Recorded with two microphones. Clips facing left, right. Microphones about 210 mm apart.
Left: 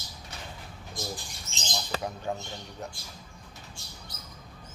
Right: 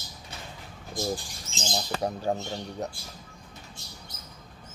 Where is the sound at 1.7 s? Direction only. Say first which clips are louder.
Right 4 dB; 35° right (ahead or behind).